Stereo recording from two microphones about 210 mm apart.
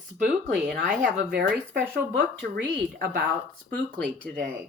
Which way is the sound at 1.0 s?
55° right (ahead or behind).